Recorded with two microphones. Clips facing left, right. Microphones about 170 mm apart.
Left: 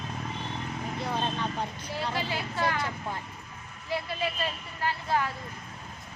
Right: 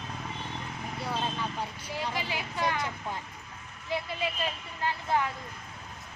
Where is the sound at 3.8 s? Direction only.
20° right (ahead or behind).